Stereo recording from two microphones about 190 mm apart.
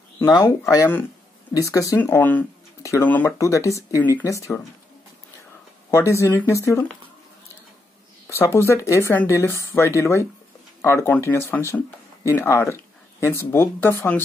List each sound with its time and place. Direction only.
0.2 s speech: 15° left (ahead or behind)
5.9 s speech: 15° left (ahead or behind)
8.3 s speech: 15° left (ahead or behind)